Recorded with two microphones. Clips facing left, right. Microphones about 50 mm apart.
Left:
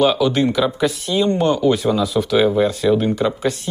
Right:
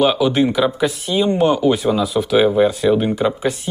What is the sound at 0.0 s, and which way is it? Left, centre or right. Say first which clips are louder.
Speech: right 1 dB; centre.